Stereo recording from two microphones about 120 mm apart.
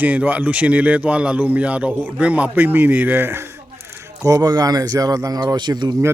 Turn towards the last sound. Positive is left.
turn(degrees=-35)  # may be behind; listen again after turning